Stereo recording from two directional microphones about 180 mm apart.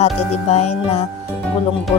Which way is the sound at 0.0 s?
35° left (ahead or behind).